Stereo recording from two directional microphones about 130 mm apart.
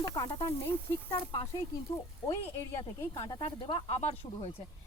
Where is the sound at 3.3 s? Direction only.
40° left (ahead or behind).